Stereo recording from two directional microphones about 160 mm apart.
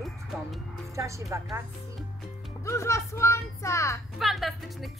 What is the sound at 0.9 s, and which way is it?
Speech, 20° right (ahead or behind).